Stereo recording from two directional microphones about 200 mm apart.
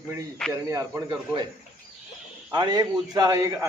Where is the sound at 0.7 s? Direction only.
15° right (ahead or behind).